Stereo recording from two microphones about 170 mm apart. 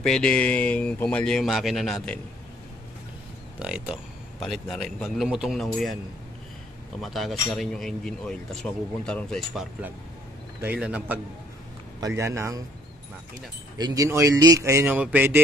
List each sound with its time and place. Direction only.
0.0 s speech: 5° left (ahead or behind)
3.5 s speech: 5° right (ahead or behind)
7.0 s speech: centre (ahead or behind)
12.2 s speech: 15° right (ahead or behind)
13.7 s speech: 20° right (ahead or behind)